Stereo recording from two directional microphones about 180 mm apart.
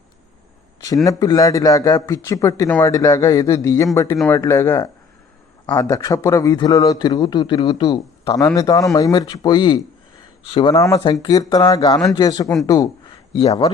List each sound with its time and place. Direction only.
1.0 s a man's voice: 20° left (ahead or behind)
10.8 s a man's voice: 20° left (ahead or behind)
13.3 s speech: 35° left (ahead or behind)